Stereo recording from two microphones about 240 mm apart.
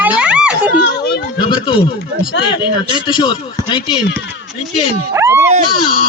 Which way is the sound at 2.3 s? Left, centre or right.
Left.